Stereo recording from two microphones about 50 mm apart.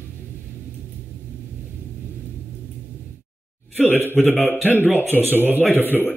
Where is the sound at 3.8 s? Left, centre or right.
Left.